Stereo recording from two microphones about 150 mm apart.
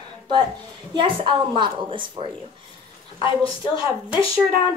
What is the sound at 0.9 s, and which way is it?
A woman's voice, 35° right (ahead or behind).